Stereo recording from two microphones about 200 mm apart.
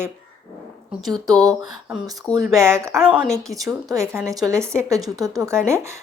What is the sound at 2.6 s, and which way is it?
A woman's voice, 15° right (ahead or behind).